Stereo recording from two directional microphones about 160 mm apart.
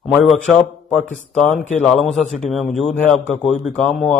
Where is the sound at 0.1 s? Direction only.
Centre (ahead or behind).